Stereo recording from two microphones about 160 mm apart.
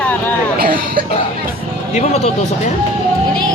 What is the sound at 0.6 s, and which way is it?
Speech, 65° right (ahead or behind).